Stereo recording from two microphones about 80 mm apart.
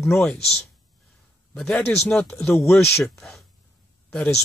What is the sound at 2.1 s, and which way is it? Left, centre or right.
Speech, left.